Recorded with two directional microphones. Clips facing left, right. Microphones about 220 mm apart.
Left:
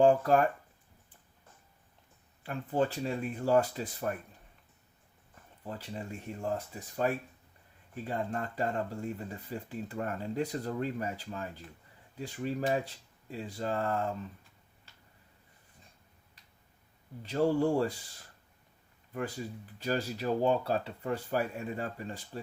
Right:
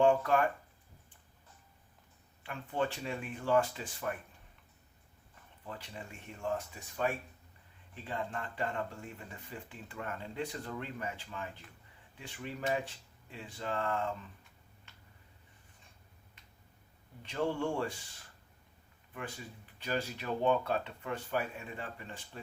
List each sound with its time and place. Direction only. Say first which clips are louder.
0.0 s speech: left 3 dB; 35° left (ahead or behind)
2.4 s speech: left 5 dB; 35° left (ahead or behind)
5.6 s speech: left 6 dB; 40° left (ahead or behind)
17.2 s speech: left 6 dB; 35° left (ahead or behind)
19.8 s speech: left 4 dB; 40° left (ahead or behind)